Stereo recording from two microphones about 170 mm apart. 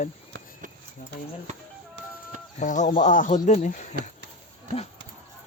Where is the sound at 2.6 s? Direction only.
45° left (ahead or behind).